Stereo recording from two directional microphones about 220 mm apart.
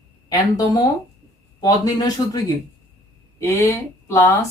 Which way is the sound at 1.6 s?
15° left (ahead or behind).